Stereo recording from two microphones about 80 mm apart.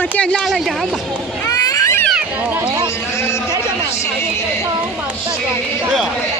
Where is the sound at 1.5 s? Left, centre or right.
Left.